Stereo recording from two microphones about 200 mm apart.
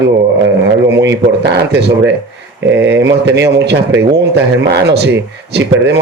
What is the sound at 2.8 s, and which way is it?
Speech, 10° right (ahead or behind).